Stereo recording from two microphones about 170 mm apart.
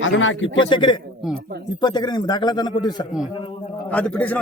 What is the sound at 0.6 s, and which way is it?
A man's voice, 30° left (ahead or behind).